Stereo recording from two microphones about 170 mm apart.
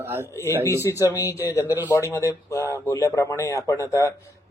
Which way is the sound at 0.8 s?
20° left (ahead or behind).